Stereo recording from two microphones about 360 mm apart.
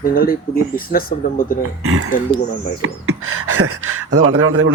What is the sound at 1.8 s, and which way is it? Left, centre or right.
A man's voice, right.